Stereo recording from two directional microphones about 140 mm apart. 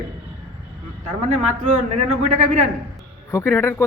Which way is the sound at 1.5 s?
60° right (ahead or behind).